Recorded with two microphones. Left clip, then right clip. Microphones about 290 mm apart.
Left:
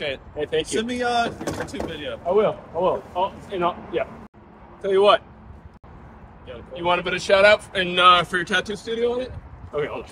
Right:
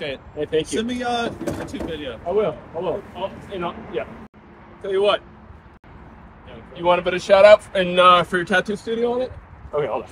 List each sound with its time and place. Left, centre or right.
0.0 s a man's voice: centre
6.7 s speech: centre